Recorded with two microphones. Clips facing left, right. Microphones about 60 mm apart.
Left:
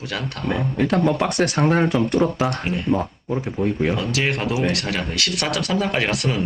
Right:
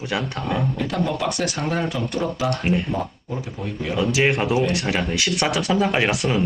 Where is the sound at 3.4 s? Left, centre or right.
Left.